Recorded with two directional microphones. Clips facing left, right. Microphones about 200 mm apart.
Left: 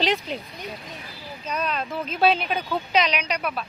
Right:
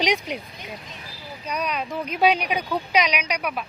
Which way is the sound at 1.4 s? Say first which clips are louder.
Even; 10° right (ahead or behind).